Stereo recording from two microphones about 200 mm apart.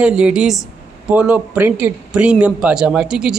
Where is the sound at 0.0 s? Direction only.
5° right (ahead or behind).